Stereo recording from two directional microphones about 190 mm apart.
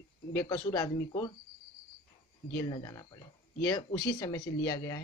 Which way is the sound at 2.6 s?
20° left (ahead or behind).